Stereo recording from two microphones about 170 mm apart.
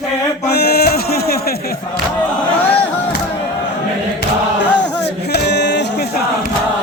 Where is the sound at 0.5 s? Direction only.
70° left (ahead or behind).